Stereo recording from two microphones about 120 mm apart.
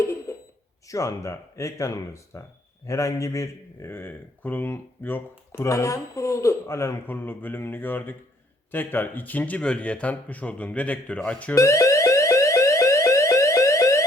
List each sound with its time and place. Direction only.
0.0 s a sound: 25° left (ahead or behind)
0.9 s speech: 25° left (ahead or behind); by 11.5 s 10° left (ahead or behind)
11.5 s alarm: 25° left (ahead or behind)